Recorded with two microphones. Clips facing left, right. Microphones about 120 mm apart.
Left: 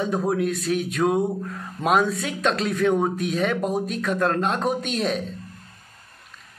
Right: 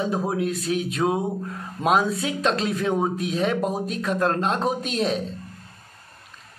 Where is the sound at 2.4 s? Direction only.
30° right (ahead or behind).